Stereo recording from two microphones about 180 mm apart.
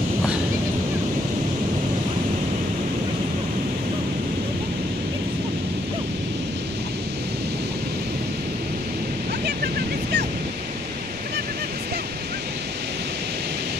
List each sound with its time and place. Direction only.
9.6 s vehicle: 60° right (ahead or behind)